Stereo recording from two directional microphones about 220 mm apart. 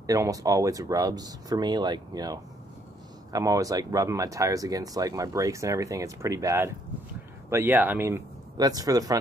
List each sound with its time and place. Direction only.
0.0 s speech: 15° right (ahead or behind)